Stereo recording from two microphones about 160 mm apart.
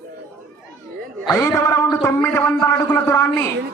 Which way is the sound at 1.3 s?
20° left (ahead or behind).